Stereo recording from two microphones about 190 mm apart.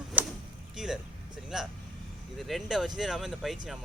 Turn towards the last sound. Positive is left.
turn(degrees=0)  # may be behind; listen again after turning